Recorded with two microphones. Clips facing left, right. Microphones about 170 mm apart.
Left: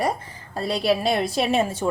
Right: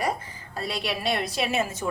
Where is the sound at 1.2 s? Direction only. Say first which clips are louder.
Left 5 dB; centre (ahead or behind).